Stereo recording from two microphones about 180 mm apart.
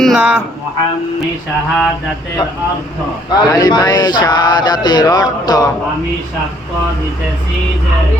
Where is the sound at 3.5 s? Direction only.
20° left (ahead or behind).